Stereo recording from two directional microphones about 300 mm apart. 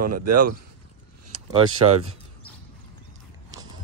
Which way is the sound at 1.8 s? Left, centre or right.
Centre.